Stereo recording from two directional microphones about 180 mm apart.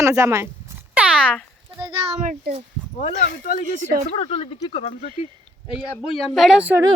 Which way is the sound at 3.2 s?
50° left (ahead or behind).